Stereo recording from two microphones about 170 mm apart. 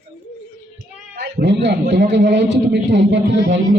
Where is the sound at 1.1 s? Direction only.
85° right.